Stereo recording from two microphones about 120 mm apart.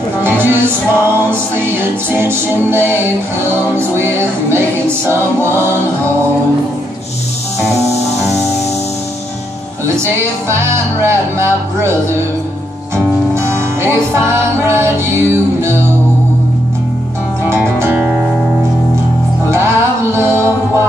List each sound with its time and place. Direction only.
0.2 s music: 20° right (ahead or behind)
10.5 s music: 20° right (ahead or behind)
12.9 s music: 20° right (ahead or behind)
19.5 s music: 20° right (ahead or behind)